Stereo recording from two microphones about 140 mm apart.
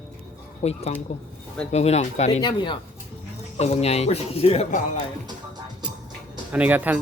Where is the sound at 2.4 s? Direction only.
30° left (ahead or behind).